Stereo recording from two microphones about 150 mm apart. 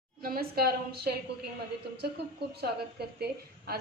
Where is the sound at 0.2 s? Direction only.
90° right.